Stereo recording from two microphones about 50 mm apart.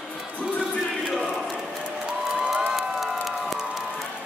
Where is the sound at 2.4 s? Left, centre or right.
Centre.